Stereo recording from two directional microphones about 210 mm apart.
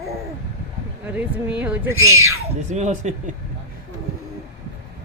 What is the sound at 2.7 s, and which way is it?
Speech, 35° right (ahead or behind).